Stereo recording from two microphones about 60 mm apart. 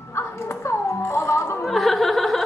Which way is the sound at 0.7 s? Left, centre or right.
Left.